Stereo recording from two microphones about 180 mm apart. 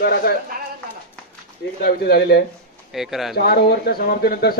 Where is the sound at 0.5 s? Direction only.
55° right (ahead or behind).